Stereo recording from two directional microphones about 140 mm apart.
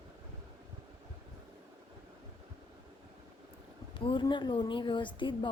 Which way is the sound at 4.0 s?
35° left (ahead or behind).